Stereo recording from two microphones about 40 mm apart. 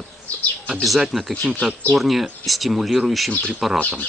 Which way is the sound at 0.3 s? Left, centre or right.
Left.